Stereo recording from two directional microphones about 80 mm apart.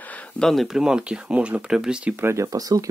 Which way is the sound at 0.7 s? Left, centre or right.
Centre.